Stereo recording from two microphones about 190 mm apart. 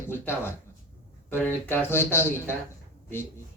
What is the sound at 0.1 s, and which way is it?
Speech, 10° left (ahead or behind).